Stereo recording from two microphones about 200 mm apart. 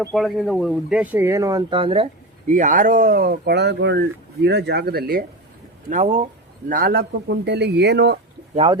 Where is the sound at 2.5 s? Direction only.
40° right (ahead or behind).